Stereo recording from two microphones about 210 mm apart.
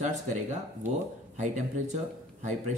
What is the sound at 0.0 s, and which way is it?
Speech, 35° right (ahead or behind).